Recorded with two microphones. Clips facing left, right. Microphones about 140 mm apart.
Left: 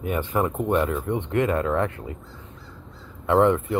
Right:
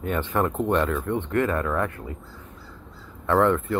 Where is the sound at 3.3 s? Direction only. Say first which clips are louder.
Left 2 dB; 15° left (ahead or behind).